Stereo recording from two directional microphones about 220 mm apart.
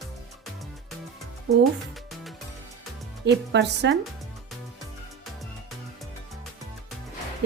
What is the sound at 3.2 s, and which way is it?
Speech, 50° right (ahead or behind).